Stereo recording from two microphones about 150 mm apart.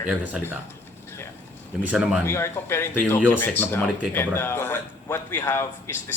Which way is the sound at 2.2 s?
15° left (ahead or behind).